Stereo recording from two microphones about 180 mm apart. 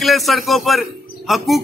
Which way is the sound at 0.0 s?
Centre (ahead or behind).